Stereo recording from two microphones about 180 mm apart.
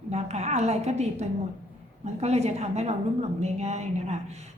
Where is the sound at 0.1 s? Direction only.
40° right (ahead or behind).